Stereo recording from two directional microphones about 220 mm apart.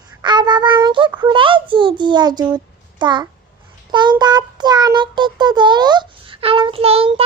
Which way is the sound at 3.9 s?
20° right (ahead or behind).